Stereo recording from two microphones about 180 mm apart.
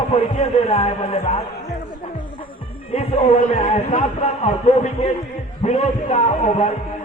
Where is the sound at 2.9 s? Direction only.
35° left (ahead or behind).